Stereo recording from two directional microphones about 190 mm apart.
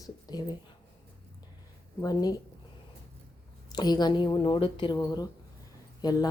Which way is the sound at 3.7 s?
20° left (ahead or behind).